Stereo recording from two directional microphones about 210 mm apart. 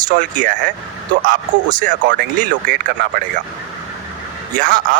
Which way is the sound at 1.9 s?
40° right (ahead or behind).